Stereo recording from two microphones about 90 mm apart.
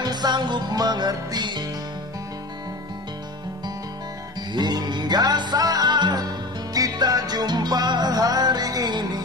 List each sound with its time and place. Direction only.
0.0 s music: 50° right (ahead or behind)
4.5 s music: 50° right (ahead or behind)